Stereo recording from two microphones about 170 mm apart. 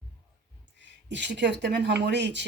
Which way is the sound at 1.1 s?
90° right.